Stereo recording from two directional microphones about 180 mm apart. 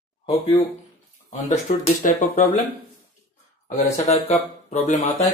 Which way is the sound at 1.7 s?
45° left (ahead or behind).